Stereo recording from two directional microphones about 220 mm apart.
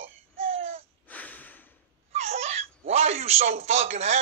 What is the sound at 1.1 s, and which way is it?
Snort, 5° left (ahead or behind).